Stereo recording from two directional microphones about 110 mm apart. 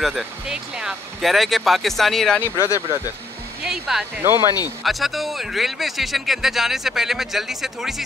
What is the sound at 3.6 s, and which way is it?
Speech, 5° right (ahead or behind).